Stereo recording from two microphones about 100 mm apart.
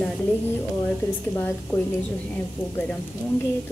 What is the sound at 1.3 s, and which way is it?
Speech, 25° left (ahead or behind).